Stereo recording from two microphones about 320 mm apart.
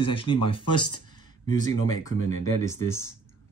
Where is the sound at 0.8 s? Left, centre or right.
Left.